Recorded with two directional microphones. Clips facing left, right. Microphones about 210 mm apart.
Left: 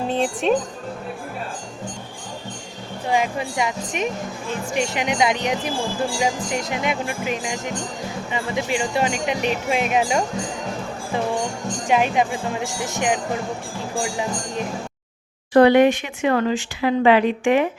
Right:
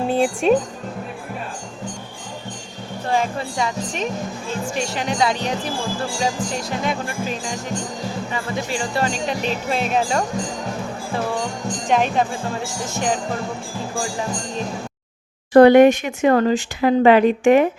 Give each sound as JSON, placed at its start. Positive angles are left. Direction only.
{"t": 0.1, "sound": "music", "side_deg": -10}
{"t": 3.1, "sound": "speech", "side_deg": 15}
{"t": 11.9, "sound": "speech", "side_deg": 10}
{"t": 15.5, "sound": "speech", "side_deg": -45}